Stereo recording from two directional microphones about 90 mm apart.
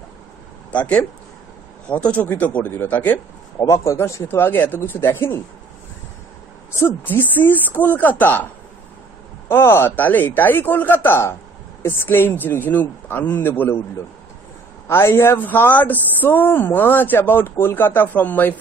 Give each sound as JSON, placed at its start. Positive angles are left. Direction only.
{"t": 0.7, "sound": "speech", "side_deg": 15}
{"t": 3.5, "sound": "speech", "side_deg": 35}
{"t": 6.8, "sound": "speech", "side_deg": 20}
{"t": 9.5, "sound": "speech", "side_deg": 25}
{"t": 14.9, "sound": "speech", "side_deg": 30}